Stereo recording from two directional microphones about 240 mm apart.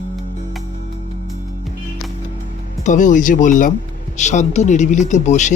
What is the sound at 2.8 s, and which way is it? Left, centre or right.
Speech, left.